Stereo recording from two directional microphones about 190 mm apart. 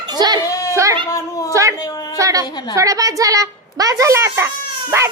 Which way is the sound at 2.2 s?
15° right (ahead or behind).